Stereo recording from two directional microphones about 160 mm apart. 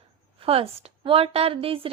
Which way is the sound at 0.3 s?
35° right (ahead or behind).